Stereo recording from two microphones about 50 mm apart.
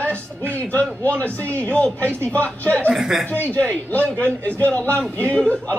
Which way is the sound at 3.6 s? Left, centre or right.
Left.